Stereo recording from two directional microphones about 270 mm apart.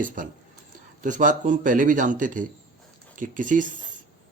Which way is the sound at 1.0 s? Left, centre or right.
Right.